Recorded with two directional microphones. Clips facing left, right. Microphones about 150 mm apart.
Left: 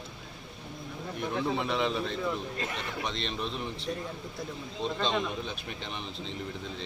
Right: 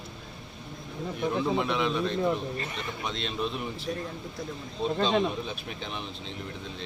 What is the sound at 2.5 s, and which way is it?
Speech, 90° left.